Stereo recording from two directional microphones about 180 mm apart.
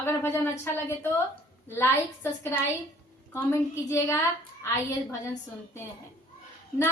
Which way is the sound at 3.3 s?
15° left (ahead or behind).